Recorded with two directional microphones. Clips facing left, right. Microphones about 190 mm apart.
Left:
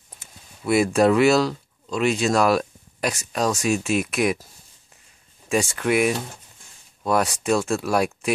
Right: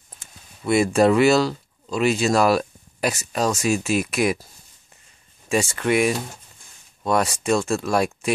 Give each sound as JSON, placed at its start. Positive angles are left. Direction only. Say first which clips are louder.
{"t": 0.2, "sound": "speech", "louder": "even", "side_deg": 0}
{"t": 5.5, "sound": "speech", "louder": "right 1 dB", "side_deg": 0}